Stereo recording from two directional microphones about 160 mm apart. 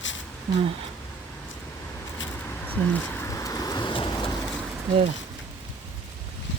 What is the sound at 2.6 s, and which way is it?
Vehicle, 10° left (ahead or behind).